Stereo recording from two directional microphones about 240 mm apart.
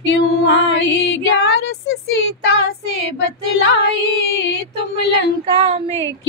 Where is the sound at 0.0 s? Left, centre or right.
Left.